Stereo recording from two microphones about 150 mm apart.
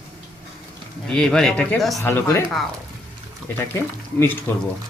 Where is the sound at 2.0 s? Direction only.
15° left (ahead or behind).